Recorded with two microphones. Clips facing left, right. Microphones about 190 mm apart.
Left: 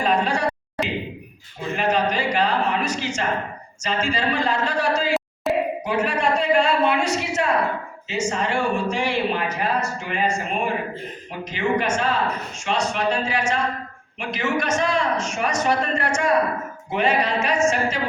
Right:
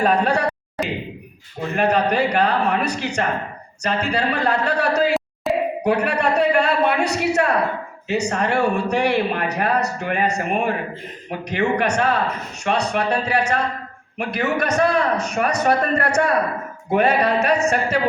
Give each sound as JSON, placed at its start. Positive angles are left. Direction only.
{"t": 0.0, "sound": "a man's voice", "side_deg": -60}
{"t": 1.7, "sound": "a man's voice", "side_deg": -60}
{"t": 5.5, "sound": "a sound", "side_deg": 0}
{"t": 5.8, "sound": "a man's voice", "side_deg": -65}